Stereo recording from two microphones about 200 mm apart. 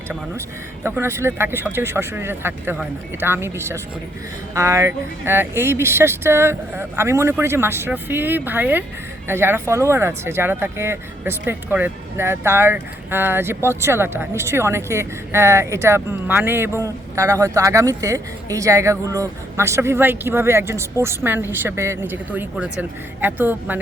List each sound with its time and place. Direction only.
0.9 s speech: 10° right (ahead or behind)